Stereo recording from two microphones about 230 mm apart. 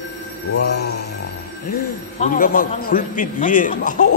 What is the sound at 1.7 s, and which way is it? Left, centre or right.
A man's voice, left.